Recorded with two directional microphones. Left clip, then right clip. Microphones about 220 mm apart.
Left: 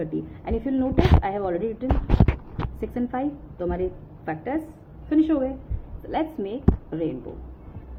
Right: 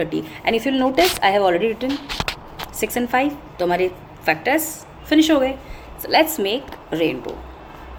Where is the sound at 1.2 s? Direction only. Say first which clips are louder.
Right 11 dB; 70° right (ahead or behind).